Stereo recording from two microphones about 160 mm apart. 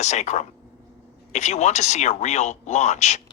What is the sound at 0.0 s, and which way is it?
Speech, 45° left (ahead or behind).